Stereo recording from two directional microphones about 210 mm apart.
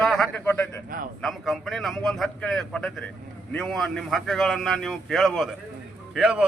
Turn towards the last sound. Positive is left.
turn(degrees=-5)  # may be behind; listen again after turning